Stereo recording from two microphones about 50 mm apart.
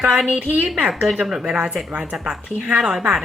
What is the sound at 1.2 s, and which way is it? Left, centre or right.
Speech, centre.